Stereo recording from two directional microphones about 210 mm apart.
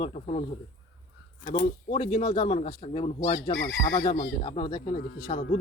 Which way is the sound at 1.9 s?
30° left (ahead or behind).